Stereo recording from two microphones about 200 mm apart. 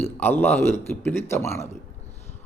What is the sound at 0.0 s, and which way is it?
Speech, 10° left (ahead or behind).